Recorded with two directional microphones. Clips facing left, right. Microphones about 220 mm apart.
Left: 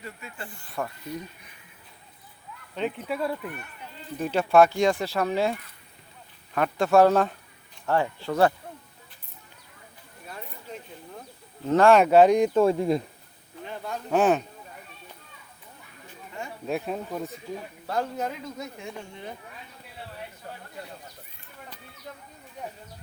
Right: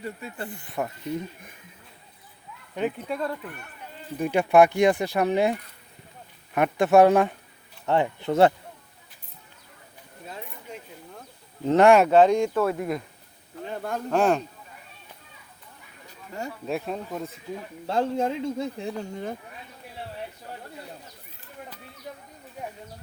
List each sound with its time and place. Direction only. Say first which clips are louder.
0.0 s speech: right 6 dB; 35° right (ahead or behind)
0.5 s speech: even; 20° right (ahead or behind)
2.7 s speech: right 2 dB; 10° right (ahead or behind)
3.1 s speech: left 1 dB; 10° left (ahead or behind)
4.2 s speech: right 1 dB; 15° right (ahead or behind)
10.2 s a sound: right 1 dB; 20° right (ahead or behind)
11.7 s speech: right 2 dB; 20° right (ahead or behind)
12.0 s speech: left 1 dB; 10° left (ahead or behind); by 13.0 s 25° left (ahead or behind)
13.7 s a sound: right 4 dB; 50° right (ahead or behind)
14.1 s speech: left 1 dB; 5° left (ahead or behind)
16.0 s a sound: right 3 dB; 40° right (ahead or behind)
16.6 s speech: left 1 dB; centre (ahead or behind)
17.8 s speech: right 5 dB; 25° right (ahead or behind)